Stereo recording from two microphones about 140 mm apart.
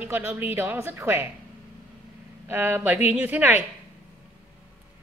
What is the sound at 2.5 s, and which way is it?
Speech, 15° right (ahead or behind).